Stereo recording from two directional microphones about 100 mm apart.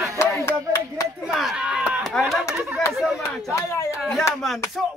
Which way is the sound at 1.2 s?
5° right (ahead or behind).